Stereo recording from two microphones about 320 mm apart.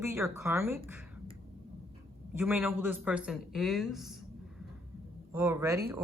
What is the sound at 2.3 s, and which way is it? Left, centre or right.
A man's voice, centre.